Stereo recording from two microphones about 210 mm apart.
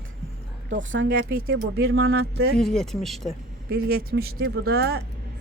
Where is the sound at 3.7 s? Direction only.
50° right (ahead or behind).